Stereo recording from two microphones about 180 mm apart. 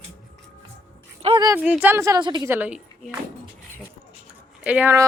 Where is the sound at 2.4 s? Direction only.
10° right (ahead or behind).